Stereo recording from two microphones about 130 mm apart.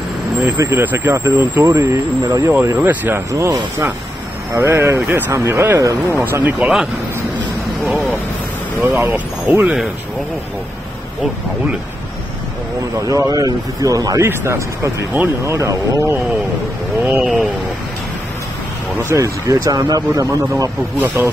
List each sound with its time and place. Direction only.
0.6 s speech: 20° right (ahead or behind)
6.6 s speech: 5° right (ahead or behind)
8.8 s speech: 10° right (ahead or behind)
13.0 s speech: 25° right (ahead or behind)
17.0 s speech: 5° right (ahead or behind)
19.0 s speech: 25° right (ahead or behind)